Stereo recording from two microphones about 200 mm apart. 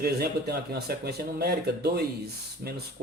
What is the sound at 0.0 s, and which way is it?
Speech, 50° right (ahead or behind).